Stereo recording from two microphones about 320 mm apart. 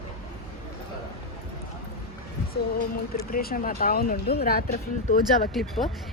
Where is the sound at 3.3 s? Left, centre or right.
Left.